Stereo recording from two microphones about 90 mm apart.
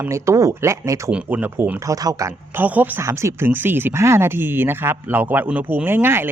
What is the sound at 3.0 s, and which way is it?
Speech, 35° right (ahead or behind).